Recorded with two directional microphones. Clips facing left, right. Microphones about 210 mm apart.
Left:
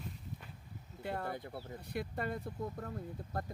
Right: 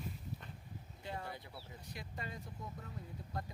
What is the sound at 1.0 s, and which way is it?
Speech, 55° left (ahead or behind).